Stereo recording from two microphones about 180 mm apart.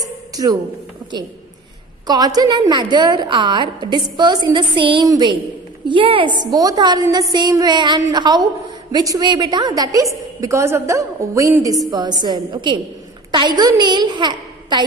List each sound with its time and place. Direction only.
0.0 s music: 20° right (ahead or behind)
2.0 s a woman's voice: 20° right (ahead or behind)